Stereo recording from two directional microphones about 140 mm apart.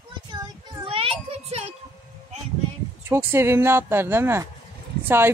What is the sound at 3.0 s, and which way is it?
Speech, 20° right (ahead or behind).